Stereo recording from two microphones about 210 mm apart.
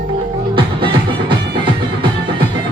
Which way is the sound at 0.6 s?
25° right (ahead or behind).